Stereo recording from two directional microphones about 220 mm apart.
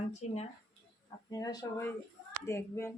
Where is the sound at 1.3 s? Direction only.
20° left (ahead or behind).